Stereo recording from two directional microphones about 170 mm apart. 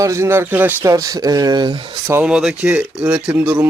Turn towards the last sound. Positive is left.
turn(degrees=-10)  # may be behind; listen again after turning